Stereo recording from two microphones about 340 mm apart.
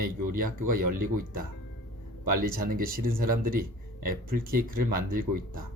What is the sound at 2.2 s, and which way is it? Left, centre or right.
Speech, right.